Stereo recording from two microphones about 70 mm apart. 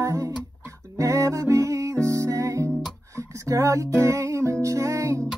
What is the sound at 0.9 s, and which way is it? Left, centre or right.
Music, right.